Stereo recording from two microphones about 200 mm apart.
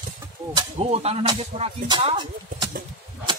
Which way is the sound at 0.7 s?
30° right (ahead or behind).